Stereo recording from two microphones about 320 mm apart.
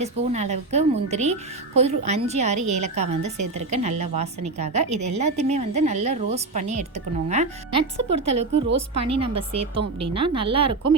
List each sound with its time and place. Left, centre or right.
0.0 s speech: right
2.6 s a woman's voice: right
2.8 s speech: right